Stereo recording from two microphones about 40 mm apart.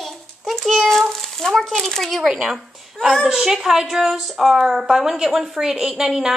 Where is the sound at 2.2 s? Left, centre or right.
Right.